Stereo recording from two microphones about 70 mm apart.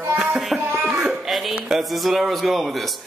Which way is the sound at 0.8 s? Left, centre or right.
Centre.